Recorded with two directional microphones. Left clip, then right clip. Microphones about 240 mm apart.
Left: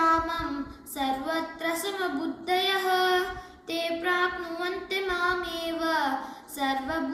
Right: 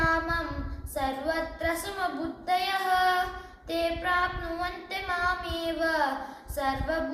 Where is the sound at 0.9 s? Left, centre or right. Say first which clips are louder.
Even; centre.